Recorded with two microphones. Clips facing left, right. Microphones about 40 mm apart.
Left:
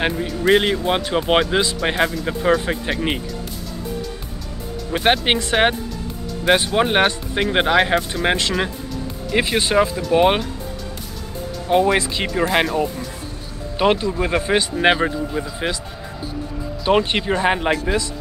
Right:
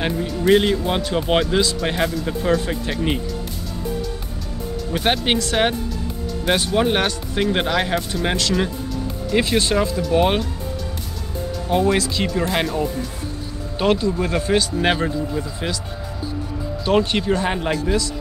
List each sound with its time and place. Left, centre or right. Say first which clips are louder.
0.0 s speech: left 1 dB; left
4.9 s speech: left 3 dB; centre
11.7 s speech: left 2 dB; left
13.7 s speech: left 1 dB; left
16.8 s speech: left 1 dB; left